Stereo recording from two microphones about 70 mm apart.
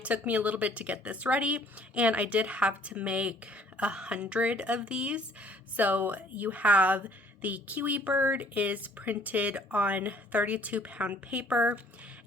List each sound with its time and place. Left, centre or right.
0.0 s speech: right